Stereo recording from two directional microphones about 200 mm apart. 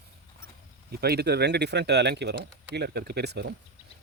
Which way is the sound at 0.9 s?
55° right (ahead or behind).